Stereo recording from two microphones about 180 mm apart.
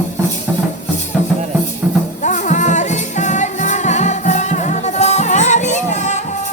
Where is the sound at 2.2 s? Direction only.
45° left (ahead or behind).